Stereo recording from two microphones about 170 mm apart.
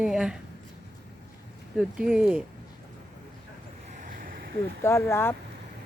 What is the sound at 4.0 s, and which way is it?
Boat, 50° right (ahead or behind).